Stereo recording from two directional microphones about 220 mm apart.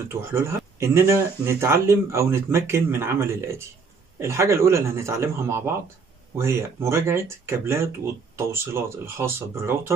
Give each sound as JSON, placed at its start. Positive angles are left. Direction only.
{"t": 0.1, "sound": "speech", "side_deg": -10}